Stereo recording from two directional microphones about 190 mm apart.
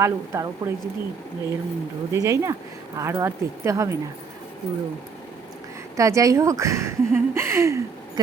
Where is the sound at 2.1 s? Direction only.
15° right (ahead or behind).